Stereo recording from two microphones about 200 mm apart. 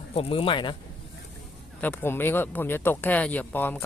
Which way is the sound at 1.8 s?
10° left (ahead or behind).